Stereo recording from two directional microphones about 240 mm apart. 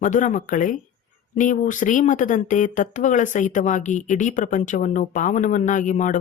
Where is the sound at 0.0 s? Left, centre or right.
Left.